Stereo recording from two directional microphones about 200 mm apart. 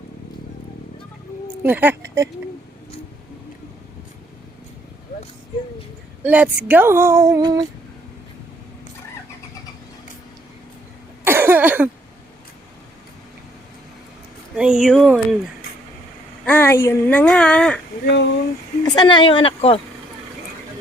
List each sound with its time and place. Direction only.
1.6 s speech: 10° right (ahead or behind)
6.2 s speech: 10° right (ahead or behind)
11.2 s cough: 10° right (ahead or behind)
14.5 s speech: 5° right (ahead or behind)
16.5 s speech: 10° left (ahead or behind)
18.0 s speech: 60° left (ahead or behind)
18.8 s speech: 20° left (ahead or behind)